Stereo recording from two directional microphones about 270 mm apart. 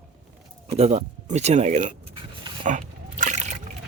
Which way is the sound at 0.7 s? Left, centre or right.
Right.